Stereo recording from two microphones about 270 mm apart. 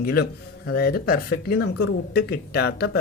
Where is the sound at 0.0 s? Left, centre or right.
Left.